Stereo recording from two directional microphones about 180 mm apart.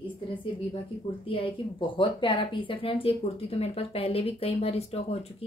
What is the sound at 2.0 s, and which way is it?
Speech, 25° left (ahead or behind).